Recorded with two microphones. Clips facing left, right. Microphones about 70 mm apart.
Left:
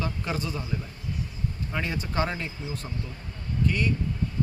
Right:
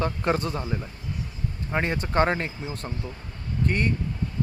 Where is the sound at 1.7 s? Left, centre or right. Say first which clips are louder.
Right 6 dB; right.